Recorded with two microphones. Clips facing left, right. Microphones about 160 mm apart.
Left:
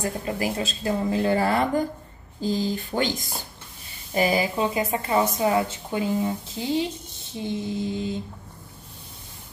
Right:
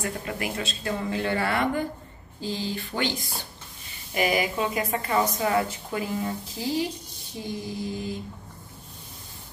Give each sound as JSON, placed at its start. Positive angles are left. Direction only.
{"t": 0.0, "sound": "speech", "side_deg": 35}
{"t": 4.1, "sound": "a woman's voice", "side_deg": 30}